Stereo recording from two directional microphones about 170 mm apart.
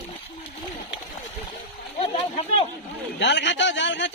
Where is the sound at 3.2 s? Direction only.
90° left.